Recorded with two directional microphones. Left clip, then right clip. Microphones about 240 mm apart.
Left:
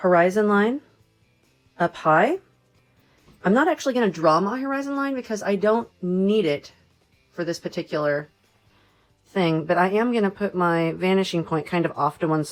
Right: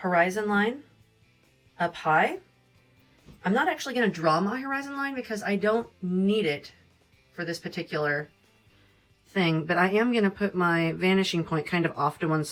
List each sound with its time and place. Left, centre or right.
0.0 s speech: left
3.4 s speech: left
9.3 s speech: centre